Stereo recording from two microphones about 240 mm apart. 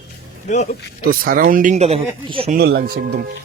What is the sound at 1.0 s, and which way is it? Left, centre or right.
Speech, right.